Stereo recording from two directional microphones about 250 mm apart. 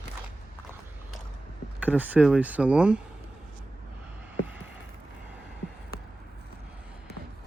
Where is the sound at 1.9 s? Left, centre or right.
Centre.